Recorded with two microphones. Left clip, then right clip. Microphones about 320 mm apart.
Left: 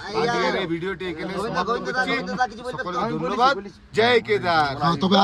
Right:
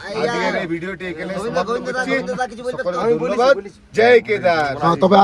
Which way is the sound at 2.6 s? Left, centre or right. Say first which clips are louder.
Right 8 dB; centre.